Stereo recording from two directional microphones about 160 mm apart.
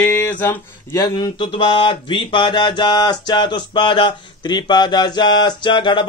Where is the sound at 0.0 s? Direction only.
10° left (ahead or behind).